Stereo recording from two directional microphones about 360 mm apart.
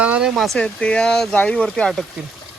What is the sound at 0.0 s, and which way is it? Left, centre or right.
Speech, centre.